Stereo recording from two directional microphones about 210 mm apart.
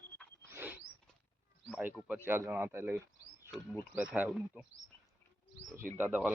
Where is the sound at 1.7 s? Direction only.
10° right (ahead or behind).